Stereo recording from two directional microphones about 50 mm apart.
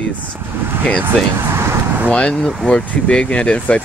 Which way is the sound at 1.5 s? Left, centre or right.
Right.